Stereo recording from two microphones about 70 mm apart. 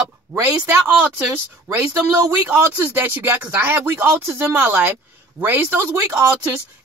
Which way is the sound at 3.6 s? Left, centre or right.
Right.